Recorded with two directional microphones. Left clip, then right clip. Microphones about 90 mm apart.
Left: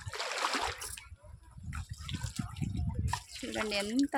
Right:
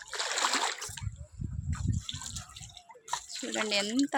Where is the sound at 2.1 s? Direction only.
55° right (ahead or behind).